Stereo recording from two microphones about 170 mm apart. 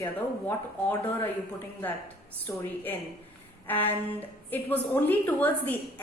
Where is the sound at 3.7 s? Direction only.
10° left (ahead or behind).